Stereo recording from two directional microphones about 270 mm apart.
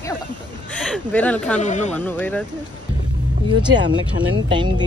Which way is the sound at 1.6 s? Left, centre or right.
Left.